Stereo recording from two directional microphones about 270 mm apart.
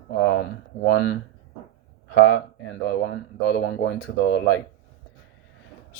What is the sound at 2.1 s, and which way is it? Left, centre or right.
Speech, left.